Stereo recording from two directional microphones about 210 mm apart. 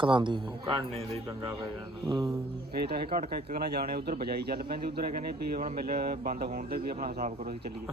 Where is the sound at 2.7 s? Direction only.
45° right (ahead or behind).